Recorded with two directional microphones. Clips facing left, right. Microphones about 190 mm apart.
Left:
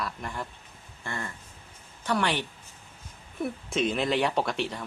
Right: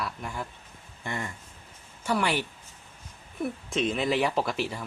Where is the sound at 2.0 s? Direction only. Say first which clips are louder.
Even; 5° right (ahead or behind).